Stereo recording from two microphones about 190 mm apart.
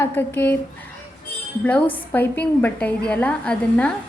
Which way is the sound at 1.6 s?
10° left (ahead or behind).